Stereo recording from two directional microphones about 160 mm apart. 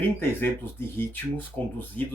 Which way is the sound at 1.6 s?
10° left (ahead or behind).